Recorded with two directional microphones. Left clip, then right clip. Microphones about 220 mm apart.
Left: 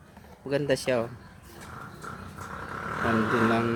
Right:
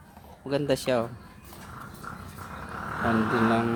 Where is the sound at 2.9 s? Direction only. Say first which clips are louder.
Even; 45° left (ahead or behind).